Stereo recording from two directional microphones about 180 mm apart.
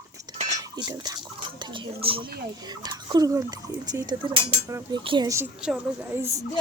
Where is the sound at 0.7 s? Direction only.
20° right (ahead or behind).